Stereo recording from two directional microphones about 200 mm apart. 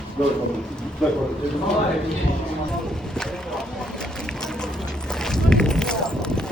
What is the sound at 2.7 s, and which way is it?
Boat, centre (ahead or behind).